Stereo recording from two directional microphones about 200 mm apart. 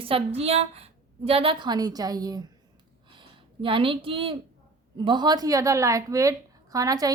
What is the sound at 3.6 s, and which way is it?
A woman's voice, 25° right (ahead or behind).